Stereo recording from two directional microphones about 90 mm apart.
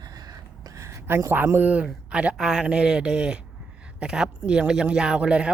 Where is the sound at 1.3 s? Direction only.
20° right (ahead or behind).